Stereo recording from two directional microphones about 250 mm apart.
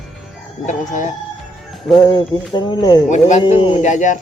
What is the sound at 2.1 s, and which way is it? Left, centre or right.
Speech, centre.